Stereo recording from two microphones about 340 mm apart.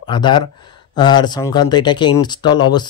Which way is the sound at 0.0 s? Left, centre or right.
Centre.